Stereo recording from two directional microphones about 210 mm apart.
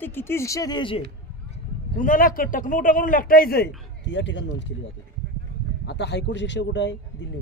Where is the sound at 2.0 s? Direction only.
40° left (ahead or behind); by 4.7 s 60° left (ahead or behind).